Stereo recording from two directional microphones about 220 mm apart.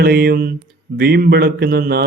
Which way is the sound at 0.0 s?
45° right (ahead or behind).